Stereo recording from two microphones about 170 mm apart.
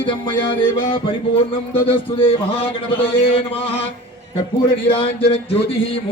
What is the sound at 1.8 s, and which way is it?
A man's voice, 30° left (ahead or behind).